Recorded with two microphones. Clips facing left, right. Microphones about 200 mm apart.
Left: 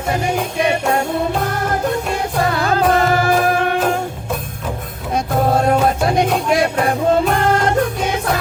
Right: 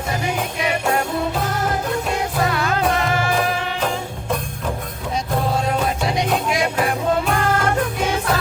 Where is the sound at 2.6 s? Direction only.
35° left (ahead or behind).